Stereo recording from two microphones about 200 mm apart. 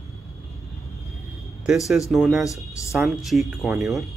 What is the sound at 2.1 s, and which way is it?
Speech, centre (ahead or behind).